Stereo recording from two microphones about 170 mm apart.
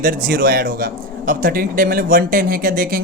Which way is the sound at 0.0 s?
55° right (ahead or behind).